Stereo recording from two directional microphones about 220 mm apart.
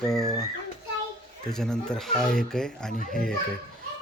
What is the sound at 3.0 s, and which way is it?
Speech, 40° left (ahead or behind).